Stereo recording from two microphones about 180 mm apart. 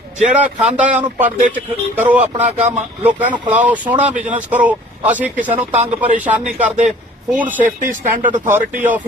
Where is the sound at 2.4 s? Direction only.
40° right (ahead or behind).